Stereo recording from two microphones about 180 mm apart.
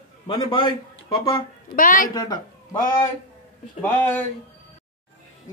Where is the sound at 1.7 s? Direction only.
50° left (ahead or behind).